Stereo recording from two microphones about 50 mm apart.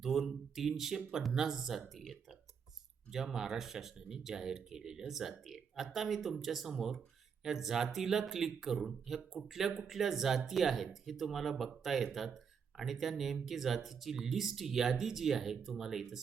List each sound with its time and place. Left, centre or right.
0.0 s speech: centre